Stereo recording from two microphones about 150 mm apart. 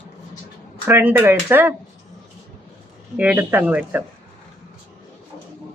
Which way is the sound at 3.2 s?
10° right (ahead or behind).